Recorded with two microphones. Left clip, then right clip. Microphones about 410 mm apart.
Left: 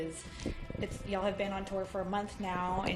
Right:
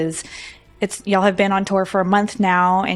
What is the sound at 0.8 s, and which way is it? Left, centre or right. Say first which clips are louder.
Speech: right 18 dB; right.